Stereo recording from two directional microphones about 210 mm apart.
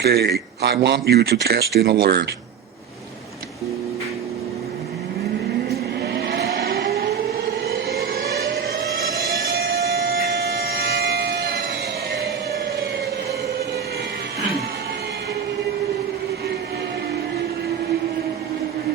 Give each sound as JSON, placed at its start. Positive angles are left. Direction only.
{"t": 0.0, "sound": "speech", "side_deg": -50}
{"t": 6.0, "sound": "vehicle", "side_deg": -50}
{"t": 9.5, "sound": "civil defense siren", "side_deg": -55}
{"t": 11.0, "sound": "a sound", "side_deg": -50}